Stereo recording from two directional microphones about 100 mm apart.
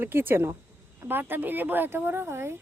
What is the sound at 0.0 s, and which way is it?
Speech, 20° right (ahead or behind).